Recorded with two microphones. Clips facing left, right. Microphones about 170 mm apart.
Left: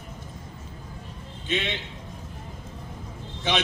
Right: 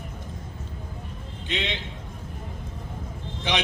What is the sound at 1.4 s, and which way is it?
Speech, 15° right (ahead or behind).